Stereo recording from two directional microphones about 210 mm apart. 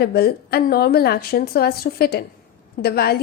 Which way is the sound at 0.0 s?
50° left (ahead or behind).